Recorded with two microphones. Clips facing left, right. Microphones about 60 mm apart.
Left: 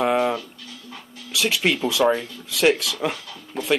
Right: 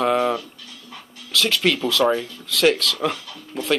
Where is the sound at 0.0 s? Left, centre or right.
Centre.